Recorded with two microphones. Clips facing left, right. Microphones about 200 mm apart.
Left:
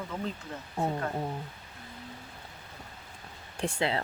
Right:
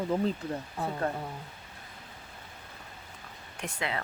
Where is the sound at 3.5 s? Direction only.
30° left (ahead or behind).